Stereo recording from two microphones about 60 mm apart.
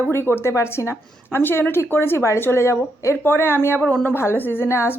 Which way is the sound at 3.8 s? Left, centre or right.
Centre.